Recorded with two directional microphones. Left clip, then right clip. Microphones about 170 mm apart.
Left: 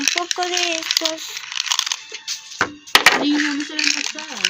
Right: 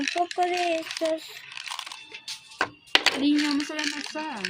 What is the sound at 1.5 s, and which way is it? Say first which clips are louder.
Crumpling: left 15 dB; 5° left (ahead or behind).